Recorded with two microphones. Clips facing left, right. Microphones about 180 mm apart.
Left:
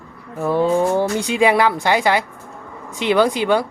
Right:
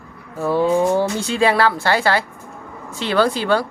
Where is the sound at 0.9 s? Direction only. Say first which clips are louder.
Even; 15° left (ahead or behind).